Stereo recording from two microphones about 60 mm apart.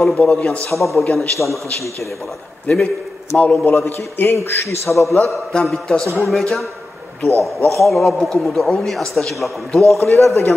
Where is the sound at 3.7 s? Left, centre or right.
Left.